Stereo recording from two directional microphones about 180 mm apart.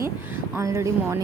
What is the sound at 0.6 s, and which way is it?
Speech, 15° right (ahead or behind).